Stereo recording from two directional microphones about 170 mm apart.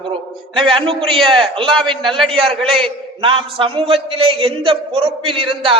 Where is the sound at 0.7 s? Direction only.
30° right (ahead or behind).